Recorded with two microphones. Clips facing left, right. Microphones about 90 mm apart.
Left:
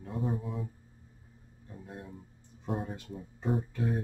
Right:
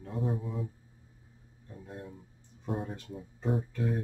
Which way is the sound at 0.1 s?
Centre (ahead or behind).